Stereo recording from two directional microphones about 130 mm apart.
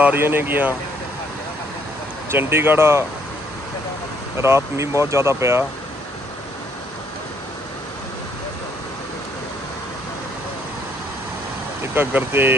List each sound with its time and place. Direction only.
0.0 s speech: 15° right (ahead or behind)
2.3 s speech: 15° right (ahead or behind)
4.4 s speech: 20° right (ahead or behind)
11.8 s speech: 15° right (ahead or behind)